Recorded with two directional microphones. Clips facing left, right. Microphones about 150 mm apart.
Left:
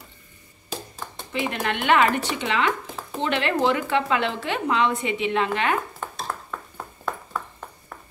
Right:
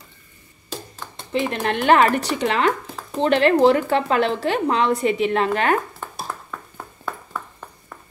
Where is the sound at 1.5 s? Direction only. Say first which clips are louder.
Right 4 dB; 35° right (ahead or behind).